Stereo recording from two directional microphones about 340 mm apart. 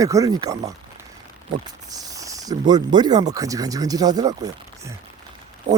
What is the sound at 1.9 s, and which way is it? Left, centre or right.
Speech, centre.